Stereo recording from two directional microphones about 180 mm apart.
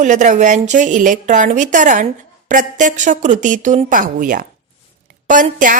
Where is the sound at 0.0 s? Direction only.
45° right (ahead or behind).